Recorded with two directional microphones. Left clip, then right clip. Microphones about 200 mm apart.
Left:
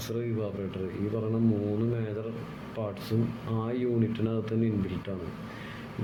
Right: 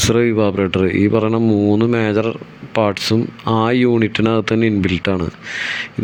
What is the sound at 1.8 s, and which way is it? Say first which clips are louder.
Speech: right 17 dB; 50° right (ahead or behind).